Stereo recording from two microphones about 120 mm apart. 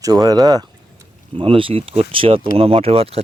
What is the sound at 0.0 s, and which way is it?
Speech, 30° right (ahead or behind).